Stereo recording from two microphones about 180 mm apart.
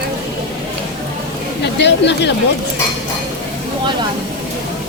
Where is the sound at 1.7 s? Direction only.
75° left (ahead or behind).